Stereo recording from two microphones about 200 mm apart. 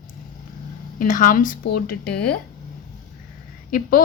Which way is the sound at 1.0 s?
40° left (ahead or behind).